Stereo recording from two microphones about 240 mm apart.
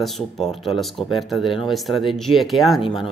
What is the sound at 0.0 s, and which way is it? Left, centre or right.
Speech, centre.